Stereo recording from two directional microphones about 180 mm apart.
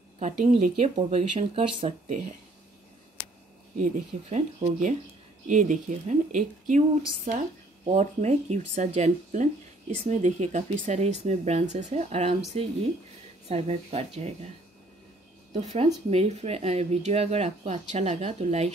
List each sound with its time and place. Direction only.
0.5 s speech: 35° right (ahead or behind)
3.7 s speech: 45° right (ahead or behind)
15.5 s speech: 35° right (ahead or behind)